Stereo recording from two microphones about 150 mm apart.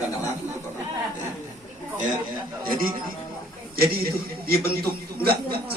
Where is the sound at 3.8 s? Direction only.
90° right.